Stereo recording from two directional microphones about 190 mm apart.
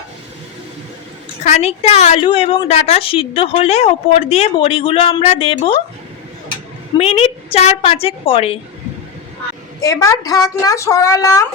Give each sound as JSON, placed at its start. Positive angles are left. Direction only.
{"t": 1.5, "sound": "a woman's voice", "side_deg": 35}
{"t": 7.0, "sound": "a woman's voice", "side_deg": 30}
{"t": 9.8, "sound": "a woman's voice", "side_deg": 15}